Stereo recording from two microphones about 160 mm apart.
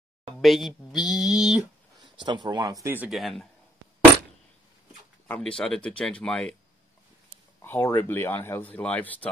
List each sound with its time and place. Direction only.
0.4 s a sound: centre (ahead or behind)
2.1 s speech: 30° right (ahead or behind)
3.1 s speech: centre (ahead or behind)
5.3 s speech: 5° left (ahead or behind)
7.6 s speech: 15° left (ahead or behind)